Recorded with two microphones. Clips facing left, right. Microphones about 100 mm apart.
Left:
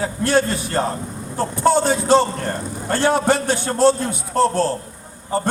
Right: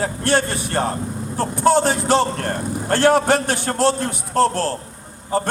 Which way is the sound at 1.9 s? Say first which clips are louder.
Left 2 dB; 60° right (ahead or behind).